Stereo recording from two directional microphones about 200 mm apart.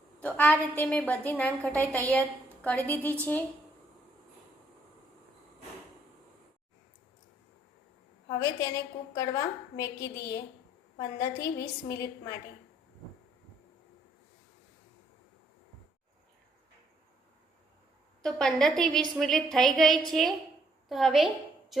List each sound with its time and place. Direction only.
0.2 s a woman's voice: 5° left (ahead or behind)
8.3 s a woman's voice: 15° left (ahead or behind)
18.2 s a woman's voice: centre (ahead or behind)
21.7 s a capella: centre (ahead or behind)